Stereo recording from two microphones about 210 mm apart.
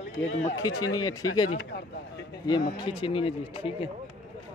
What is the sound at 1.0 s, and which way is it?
Speech, 20° left (ahead or behind).